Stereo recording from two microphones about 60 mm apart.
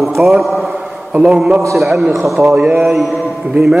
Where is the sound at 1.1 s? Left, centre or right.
Right.